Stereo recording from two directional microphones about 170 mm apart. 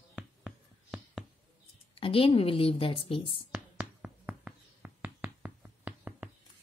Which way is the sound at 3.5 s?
10° right (ahead or behind).